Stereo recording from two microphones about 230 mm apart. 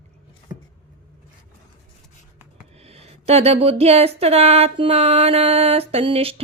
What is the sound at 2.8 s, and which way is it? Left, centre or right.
Speech, right.